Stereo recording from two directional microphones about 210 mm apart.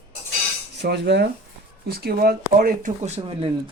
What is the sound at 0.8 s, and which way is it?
Speech, 55° right (ahead or behind).